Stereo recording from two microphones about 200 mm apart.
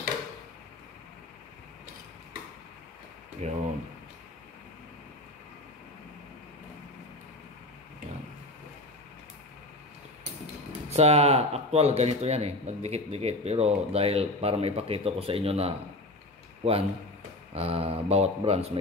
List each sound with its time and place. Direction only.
3.4 s speech: 35° right (ahead or behind)
10.9 s speech: 30° right (ahead or behind)